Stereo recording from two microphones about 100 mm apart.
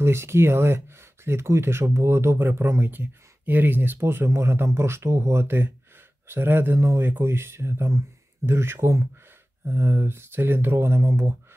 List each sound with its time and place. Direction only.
0.0 s speech: 25° right (ahead or behind)